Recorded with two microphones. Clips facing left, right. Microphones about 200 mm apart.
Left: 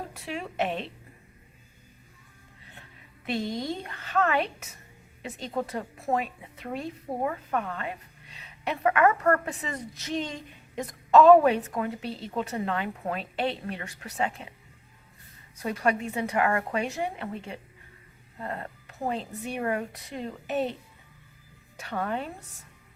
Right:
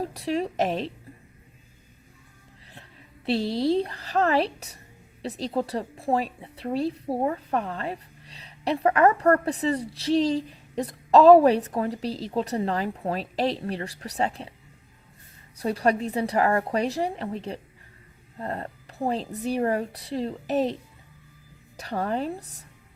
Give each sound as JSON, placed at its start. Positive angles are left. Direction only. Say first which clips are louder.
{"t": 0.0, "sound": "a woman's voice", "louder": "right 9 dB", "side_deg": -35}
{"t": 3.2, "sound": "a woman's voice", "louder": "right 7 dB", "side_deg": -35}
{"t": 15.5, "sound": "a woman's voice", "louder": "right 4 dB", "side_deg": -35}
{"t": 21.8, "sound": "a woman's voice", "louder": "right 4 dB", "side_deg": -35}